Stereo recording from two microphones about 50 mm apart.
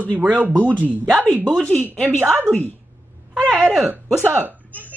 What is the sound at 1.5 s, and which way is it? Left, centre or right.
Speech, left.